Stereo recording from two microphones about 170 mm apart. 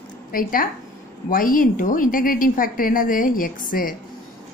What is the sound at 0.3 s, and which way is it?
A woman's voice, 55° left (ahead or behind).